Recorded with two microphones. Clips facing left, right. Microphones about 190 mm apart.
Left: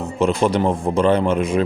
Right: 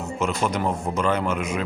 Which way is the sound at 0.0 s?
30° left (ahead or behind).